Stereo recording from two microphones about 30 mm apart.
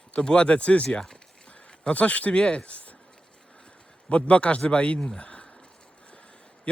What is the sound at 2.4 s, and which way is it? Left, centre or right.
Speech, left.